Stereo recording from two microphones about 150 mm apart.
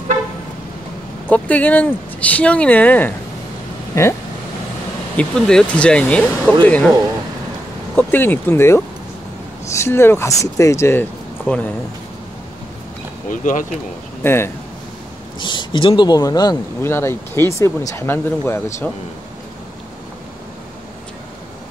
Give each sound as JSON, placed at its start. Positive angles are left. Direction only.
{"t": 1.3, "sound": "speech", "side_deg": 10}
{"t": 3.9, "sound": "speech", "side_deg": 20}
{"t": 5.1, "sound": "speech", "side_deg": 5}
{"t": 7.9, "sound": "speech", "side_deg": 15}
{"t": 13.3, "sound": "speech", "side_deg": 60}
{"t": 14.2, "sound": "speech", "side_deg": 15}
{"t": 15.3, "sound": "speech", "side_deg": 35}